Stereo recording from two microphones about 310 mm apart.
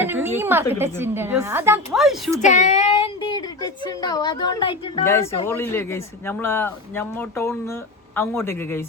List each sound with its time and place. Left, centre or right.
0.0 s a woman's voice: centre
2.4 s child singing: left
3.8 s speech: centre